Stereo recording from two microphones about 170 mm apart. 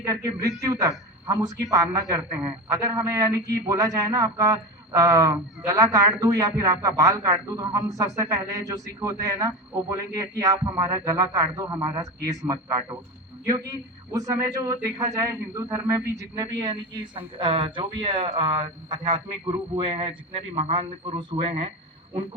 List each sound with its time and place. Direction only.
0.0 s a man's voice: 20° right (ahead or behind)